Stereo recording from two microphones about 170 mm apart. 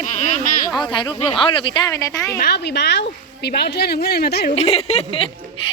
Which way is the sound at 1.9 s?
20° left (ahead or behind).